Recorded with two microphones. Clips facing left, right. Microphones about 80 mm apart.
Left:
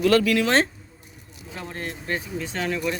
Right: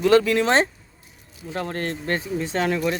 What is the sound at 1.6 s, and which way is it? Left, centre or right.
Speech, right.